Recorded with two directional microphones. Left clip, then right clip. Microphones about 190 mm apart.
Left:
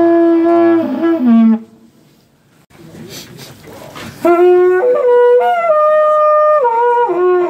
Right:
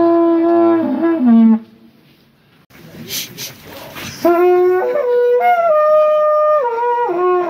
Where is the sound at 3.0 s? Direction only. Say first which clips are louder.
Right 7 dB; 45° left (ahead or behind).